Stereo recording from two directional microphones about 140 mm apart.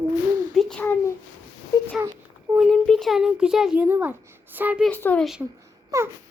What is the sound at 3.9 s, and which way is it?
Speech, 15° right (ahead or behind).